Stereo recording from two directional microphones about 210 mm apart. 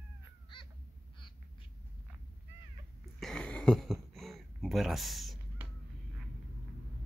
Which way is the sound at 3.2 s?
5° left (ahead or behind).